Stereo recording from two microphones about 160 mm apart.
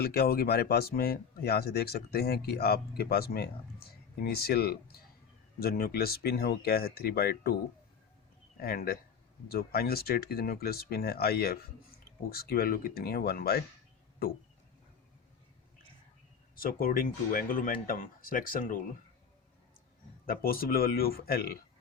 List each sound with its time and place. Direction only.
0.0 s speech: 75° left (ahead or behind)
8.5 s speech: 70° left (ahead or behind)
16.6 s speech: 65° left (ahead or behind)
20.2 s speech: 65° left (ahead or behind)